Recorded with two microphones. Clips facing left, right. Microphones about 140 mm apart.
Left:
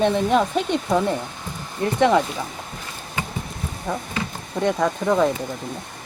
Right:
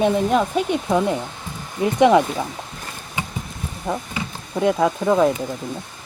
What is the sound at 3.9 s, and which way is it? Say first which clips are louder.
Speech: right 2 dB; 15° right (ahead or behind).